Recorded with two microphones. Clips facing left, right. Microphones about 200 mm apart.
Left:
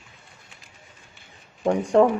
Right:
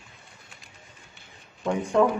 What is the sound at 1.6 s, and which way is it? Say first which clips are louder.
Speech: left 4 dB; 45° left (ahead or behind).